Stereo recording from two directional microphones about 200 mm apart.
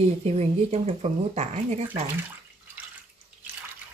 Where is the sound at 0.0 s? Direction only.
30° right (ahead or behind).